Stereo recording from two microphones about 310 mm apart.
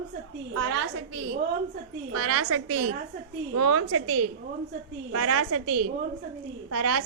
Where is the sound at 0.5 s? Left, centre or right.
Right.